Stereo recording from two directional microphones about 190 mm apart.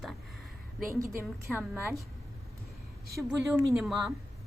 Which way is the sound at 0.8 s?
15° right (ahead or behind).